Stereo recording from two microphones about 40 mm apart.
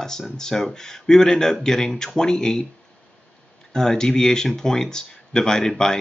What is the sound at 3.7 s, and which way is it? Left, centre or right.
Speech, centre.